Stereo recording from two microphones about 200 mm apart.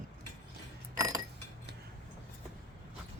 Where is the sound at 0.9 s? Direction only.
15° right (ahead or behind).